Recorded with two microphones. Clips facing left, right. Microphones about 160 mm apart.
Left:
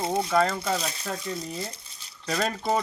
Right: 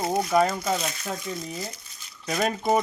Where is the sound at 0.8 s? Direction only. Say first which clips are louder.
Right 1 dB; 35° left (ahead or behind).